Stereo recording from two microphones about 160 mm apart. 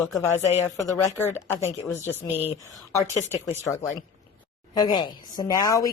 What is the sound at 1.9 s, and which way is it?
Speech, 40° left (ahead or behind).